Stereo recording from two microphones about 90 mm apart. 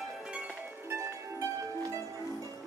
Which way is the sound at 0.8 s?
35° right (ahead or behind).